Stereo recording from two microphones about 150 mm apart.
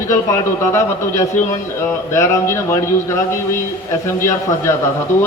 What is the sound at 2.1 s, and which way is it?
Speech, 20° left (ahead or behind).